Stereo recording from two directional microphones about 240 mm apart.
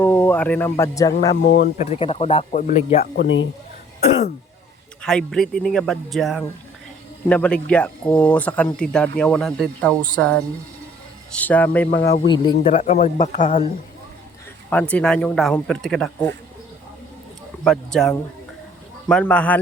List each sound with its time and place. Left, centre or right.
0.0 s a man's voice: centre
1.5 s speech: left
1.8 s speech: left
5.0 s speech: centre
11.3 s a man's voice: centre
12.2 s speech: centre
14.7 s speech: centre
17.6 s speech: centre